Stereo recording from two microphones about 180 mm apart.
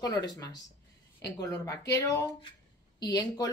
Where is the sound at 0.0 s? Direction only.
20° left (ahead or behind).